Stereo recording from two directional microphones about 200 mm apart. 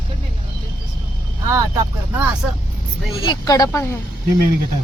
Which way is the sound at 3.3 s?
20° left (ahead or behind).